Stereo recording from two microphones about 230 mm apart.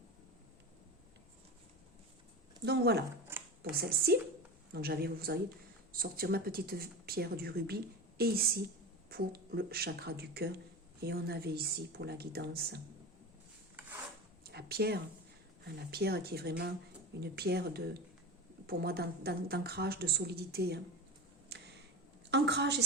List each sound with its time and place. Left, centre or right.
2.6 s a woman's voice: right
14.4 s a woman's voice: right
21.5 s a sound: right
22.3 s a woman's voice: right